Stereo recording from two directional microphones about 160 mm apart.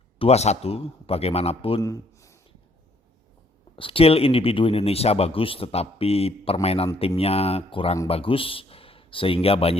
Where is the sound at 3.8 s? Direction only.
35° left (ahead or behind).